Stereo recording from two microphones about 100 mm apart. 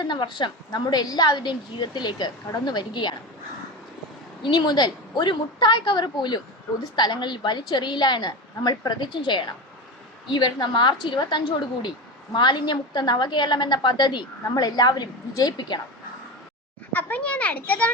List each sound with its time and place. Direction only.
0.0 s a woman's voice: 50° left (ahead or behind)
4.4 s a woman's voice: 45° left (ahead or behind)
16.9 s a child's voice: 15° left (ahead or behind)